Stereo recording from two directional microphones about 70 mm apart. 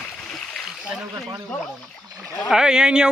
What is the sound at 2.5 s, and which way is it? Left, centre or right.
Speech, centre.